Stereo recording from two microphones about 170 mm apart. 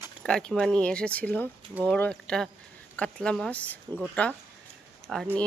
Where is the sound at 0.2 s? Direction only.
5° left (ahead or behind).